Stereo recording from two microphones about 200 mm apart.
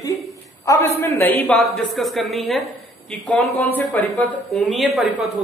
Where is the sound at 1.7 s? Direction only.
Centre (ahead or behind).